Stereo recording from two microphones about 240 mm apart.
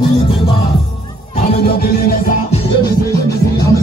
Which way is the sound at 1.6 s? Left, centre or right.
Left.